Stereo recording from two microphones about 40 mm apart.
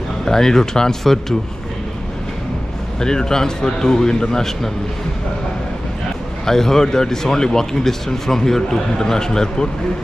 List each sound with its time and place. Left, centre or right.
0.2 s speech: centre
3.0 s speech: centre
6.4 s speech: centre